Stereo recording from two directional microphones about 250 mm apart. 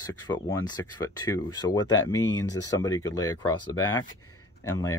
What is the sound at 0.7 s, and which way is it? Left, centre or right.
Speech, centre.